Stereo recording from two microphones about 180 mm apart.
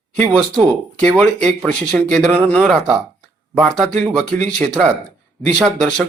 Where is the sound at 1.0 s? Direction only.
5° left (ahead or behind).